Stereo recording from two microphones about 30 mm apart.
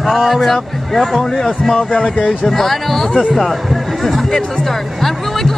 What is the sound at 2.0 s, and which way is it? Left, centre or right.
Speech, left.